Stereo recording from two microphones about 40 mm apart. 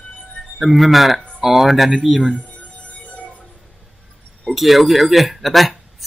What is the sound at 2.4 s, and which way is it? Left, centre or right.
Music, left.